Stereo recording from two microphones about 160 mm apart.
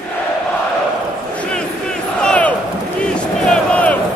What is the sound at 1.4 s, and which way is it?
Crowd, 5° left (ahead or behind).